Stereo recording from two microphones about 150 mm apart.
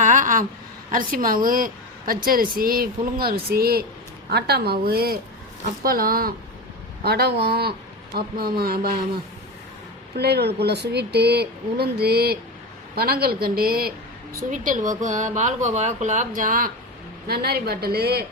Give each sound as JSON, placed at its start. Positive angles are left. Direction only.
{"t": 0.0, "sound": "a sound", "side_deg": -60}
{"t": 0.9, "sound": "a woman's voice", "side_deg": -65}
{"t": 5.8, "sound": "a woman's voice", "side_deg": -75}
{"t": 7.0, "sound": "speech", "side_deg": -90}
{"t": 10.2, "sound": "speech", "side_deg": -90}
{"t": 14.5, "sound": "speech", "side_deg": -60}
{"t": 17.2, "sound": "speech", "side_deg": -90}